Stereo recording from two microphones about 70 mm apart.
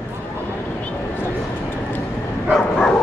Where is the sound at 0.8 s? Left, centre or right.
Left.